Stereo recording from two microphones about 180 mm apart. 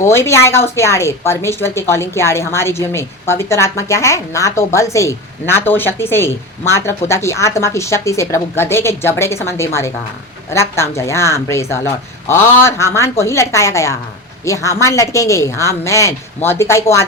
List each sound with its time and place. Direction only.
0.0 s a woman's voice: 15° left (ahead or behind)